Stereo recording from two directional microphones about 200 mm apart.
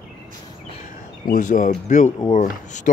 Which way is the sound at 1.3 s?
40° left (ahead or behind).